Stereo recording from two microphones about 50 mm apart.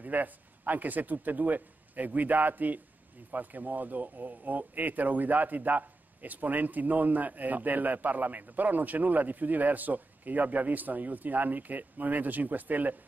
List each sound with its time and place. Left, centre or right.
0.0 s speech: right